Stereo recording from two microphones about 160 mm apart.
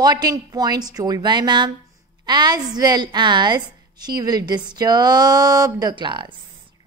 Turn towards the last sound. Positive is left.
turn(degrees=-30)  # may be behind; listen again after turning